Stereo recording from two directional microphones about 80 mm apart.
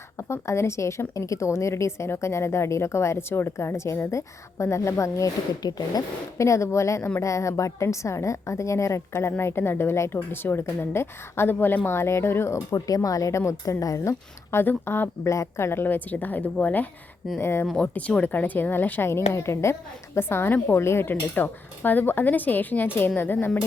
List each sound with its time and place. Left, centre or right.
0.2 s a woman's voice: left
5.6 s speech: left
6.3 s a woman's voice: left
12.5 s speech: left
14.6 s speech: left
17.4 s a woman's voice: left
17.7 s speech: centre